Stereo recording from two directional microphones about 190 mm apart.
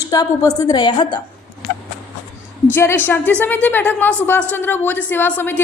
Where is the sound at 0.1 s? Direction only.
20° left (ahead or behind).